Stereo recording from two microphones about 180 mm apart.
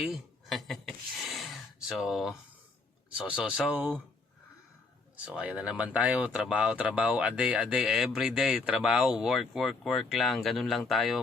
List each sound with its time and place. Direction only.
0.1 s a sound: centre (ahead or behind)
3.2 s speech: 5° right (ahead or behind)
5.2 s speech: 5° right (ahead or behind)